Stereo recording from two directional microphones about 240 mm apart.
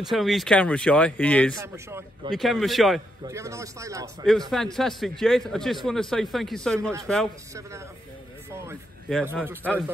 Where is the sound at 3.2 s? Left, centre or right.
Centre.